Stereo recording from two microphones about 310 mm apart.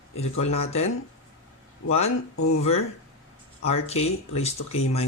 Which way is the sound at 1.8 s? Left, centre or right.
Left.